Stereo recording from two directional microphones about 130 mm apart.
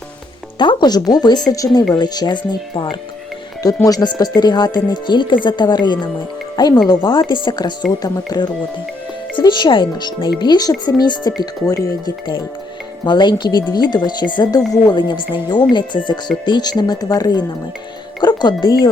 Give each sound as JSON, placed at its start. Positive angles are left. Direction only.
{"t": 0.6, "sound": "speech", "side_deg": 35}